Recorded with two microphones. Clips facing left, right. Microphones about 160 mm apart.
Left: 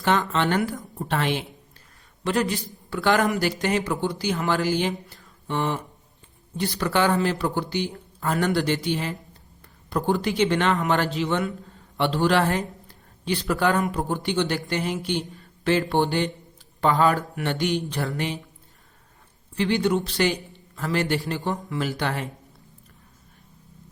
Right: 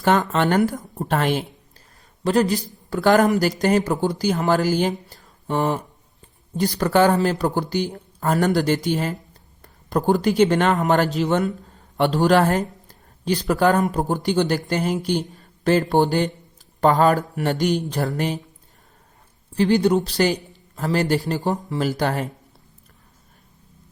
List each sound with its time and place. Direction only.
0.0 s a man's voice: 45° right (ahead or behind)
19.5 s a man's voice: 40° right (ahead or behind)